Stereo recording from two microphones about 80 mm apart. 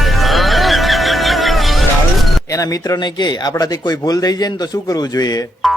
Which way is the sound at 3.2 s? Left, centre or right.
Left.